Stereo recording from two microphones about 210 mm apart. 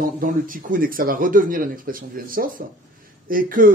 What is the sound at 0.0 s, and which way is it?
Speech, 40° right (ahead or behind).